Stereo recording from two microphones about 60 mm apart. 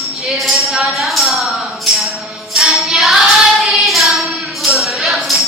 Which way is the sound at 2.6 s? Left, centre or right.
Centre.